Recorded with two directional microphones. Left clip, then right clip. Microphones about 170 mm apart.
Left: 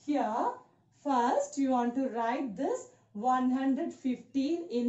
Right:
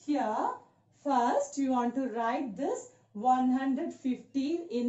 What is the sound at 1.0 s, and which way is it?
Speech, 20° left (ahead or behind).